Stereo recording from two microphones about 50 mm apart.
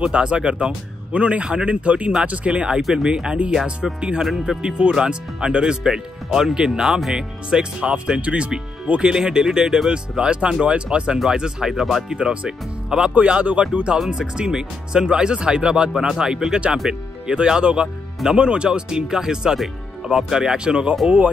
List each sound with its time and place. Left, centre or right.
0.0 s speech: right; by 12.0 s centre
12.1 s speech: centre
13.9 s speech: centre